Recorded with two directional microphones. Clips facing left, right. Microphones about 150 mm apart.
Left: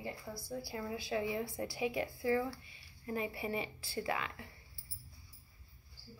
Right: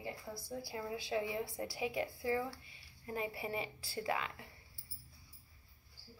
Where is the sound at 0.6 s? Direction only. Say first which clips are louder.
Left 1 dB; 20° right (ahead or behind).